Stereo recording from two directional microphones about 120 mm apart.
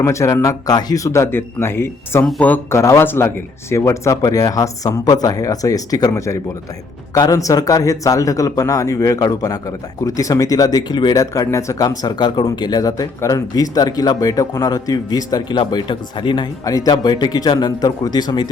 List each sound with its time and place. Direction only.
0.0 s speech: 25° left (ahead or behind)